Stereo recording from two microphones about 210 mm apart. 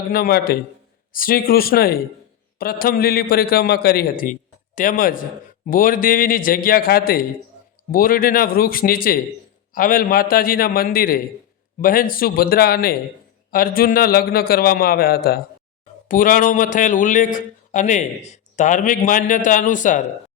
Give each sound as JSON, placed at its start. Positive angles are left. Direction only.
{"t": 0.1, "sound": "a man's voice", "side_deg": 45}